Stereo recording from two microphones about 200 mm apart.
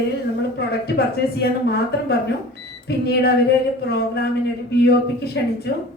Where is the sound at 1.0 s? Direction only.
55° left (ahead or behind).